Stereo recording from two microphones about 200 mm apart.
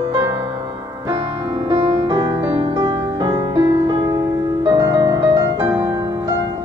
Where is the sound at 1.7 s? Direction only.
15° right (ahead or behind).